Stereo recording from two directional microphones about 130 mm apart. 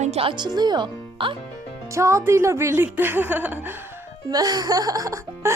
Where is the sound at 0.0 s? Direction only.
50° right (ahead or behind).